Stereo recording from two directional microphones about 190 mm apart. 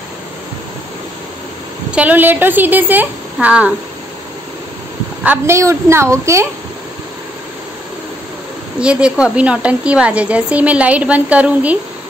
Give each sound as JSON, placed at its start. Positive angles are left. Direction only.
{"t": 1.9, "sound": "a woman's voice", "side_deg": -5}
{"t": 5.2, "sound": "a woman's voice", "side_deg": -10}
{"t": 8.7, "sound": "a woman's voice", "side_deg": -5}